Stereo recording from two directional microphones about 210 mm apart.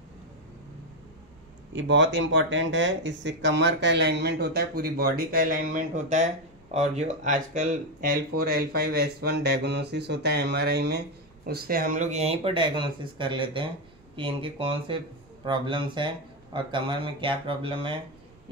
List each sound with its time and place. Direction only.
1.7 s speech: 60° right (ahead or behind); by 17.9 s 25° right (ahead or behind)